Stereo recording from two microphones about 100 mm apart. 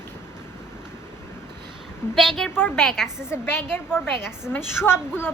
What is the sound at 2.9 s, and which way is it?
Speech, centre (ahead or behind).